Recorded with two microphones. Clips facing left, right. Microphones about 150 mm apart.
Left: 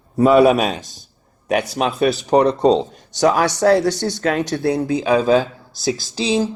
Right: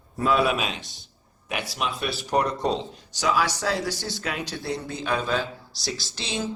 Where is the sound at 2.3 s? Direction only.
70° left (ahead or behind).